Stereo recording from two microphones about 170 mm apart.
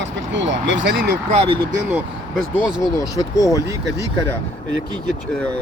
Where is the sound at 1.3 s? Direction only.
35° right (ahead or behind).